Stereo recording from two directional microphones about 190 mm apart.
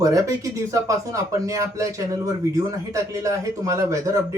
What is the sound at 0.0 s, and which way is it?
Speech, 15° right (ahead or behind).